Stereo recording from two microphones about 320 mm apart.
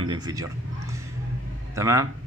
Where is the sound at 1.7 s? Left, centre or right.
Centre.